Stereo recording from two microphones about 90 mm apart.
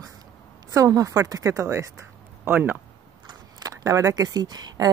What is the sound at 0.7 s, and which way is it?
A woman's voice, 40° right (ahead or behind).